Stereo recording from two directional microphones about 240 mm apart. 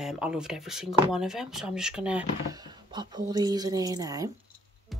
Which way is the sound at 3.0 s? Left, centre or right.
Centre.